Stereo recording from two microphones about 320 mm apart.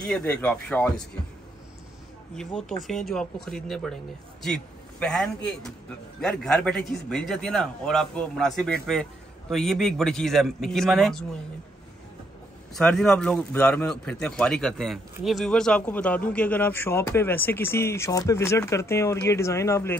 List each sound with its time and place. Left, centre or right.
0.0 s a man's voice: centre
2.3 s a man's voice: centre
12.7 s a man's voice: centre